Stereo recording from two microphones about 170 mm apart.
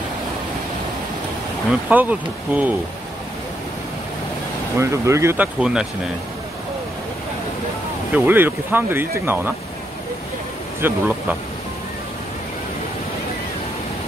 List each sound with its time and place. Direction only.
1.7 s speech: 10° right (ahead or behind)
4.7 s speech: 15° right (ahead or behind)
5.6 s speech: 5° right (ahead or behind)
8.1 s speech: 10° right (ahead or behind)
10.8 s speech: 10° right (ahead or behind)